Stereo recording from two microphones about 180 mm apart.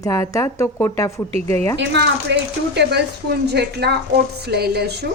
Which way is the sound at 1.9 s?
75° right (ahead or behind).